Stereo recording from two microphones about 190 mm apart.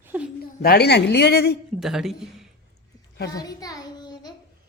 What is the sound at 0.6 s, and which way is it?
Speech, 55° left (ahead or behind).